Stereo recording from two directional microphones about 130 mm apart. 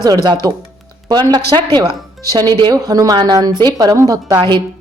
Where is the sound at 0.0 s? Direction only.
30° right (ahead or behind).